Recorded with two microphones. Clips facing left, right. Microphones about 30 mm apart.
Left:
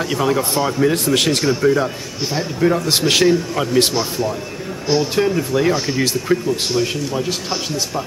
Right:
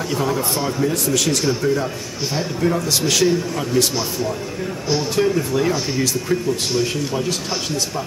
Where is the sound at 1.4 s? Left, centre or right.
Centre.